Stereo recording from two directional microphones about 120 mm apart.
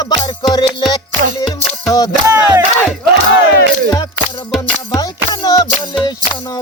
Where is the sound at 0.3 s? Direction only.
35° left (ahead or behind).